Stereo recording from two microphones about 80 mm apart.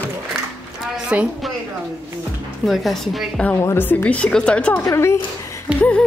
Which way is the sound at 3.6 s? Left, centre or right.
Left.